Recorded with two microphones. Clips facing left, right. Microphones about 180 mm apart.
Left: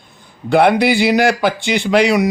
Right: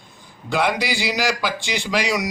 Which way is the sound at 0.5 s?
60° left (ahead or behind).